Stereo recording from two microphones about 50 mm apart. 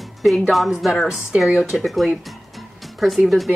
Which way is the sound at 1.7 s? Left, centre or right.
Centre.